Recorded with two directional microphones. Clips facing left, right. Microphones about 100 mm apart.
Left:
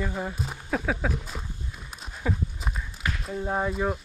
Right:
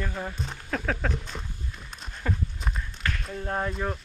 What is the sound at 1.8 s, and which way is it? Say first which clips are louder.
Horse: left 2 dB; 5° left (ahead or behind).